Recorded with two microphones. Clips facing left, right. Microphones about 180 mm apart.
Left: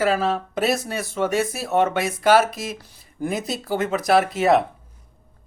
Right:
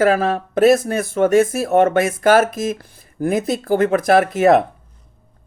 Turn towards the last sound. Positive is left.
turn(degrees=-50)  # may be behind; listen again after turning